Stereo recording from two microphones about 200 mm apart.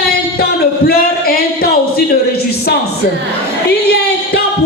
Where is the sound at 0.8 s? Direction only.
50° left (ahead or behind).